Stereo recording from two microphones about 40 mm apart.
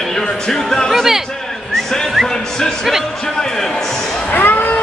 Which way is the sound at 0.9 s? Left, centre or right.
Centre.